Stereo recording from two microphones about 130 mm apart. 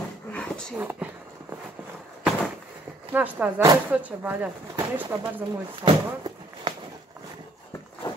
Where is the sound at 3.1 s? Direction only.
15° right (ahead or behind).